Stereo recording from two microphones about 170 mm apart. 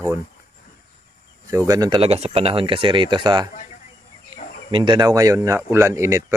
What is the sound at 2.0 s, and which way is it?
Speech, 35° right (ahead or behind).